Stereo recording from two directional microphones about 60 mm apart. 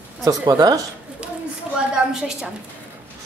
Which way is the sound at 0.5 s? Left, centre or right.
Right.